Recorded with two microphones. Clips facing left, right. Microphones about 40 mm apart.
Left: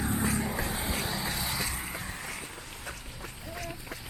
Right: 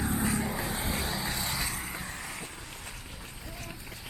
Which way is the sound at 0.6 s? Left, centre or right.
Centre.